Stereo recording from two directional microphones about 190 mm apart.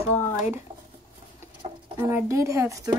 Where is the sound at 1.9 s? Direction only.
15° right (ahead or behind).